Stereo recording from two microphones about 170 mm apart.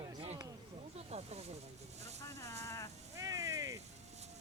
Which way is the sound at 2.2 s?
15° left (ahead or behind).